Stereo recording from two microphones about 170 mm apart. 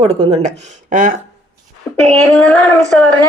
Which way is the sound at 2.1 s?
5° left (ahead or behind).